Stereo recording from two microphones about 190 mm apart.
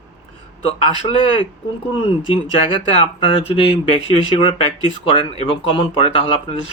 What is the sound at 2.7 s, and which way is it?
Speech, 30° left (ahead or behind).